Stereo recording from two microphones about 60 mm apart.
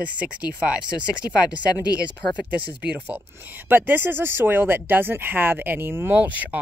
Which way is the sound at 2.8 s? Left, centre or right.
Right.